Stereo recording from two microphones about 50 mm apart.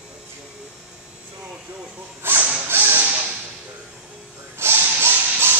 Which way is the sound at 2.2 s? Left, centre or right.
Right.